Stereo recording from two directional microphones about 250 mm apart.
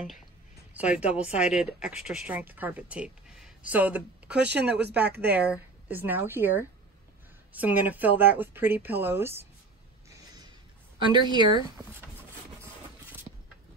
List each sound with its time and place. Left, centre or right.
0.7 s speech: centre
5.0 s speech: right
5.4 s a woman's voice: centre
10.0 s a sound: centre
11.0 s a woman's voice: centre
12.6 s scrape: centre